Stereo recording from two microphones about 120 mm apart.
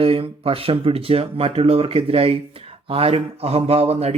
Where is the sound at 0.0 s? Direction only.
50° right (ahead or behind).